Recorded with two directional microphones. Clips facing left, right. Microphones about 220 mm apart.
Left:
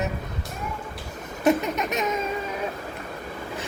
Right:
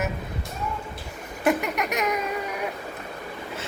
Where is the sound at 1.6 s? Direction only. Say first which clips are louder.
Even; 20° left (ahead or behind).